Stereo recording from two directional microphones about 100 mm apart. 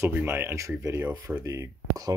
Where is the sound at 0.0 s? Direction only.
25° right (ahead or behind).